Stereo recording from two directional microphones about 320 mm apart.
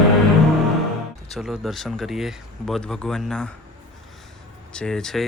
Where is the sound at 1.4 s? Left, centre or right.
Centre.